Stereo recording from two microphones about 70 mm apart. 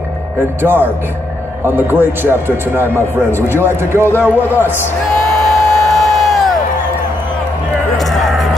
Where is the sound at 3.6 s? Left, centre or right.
Right.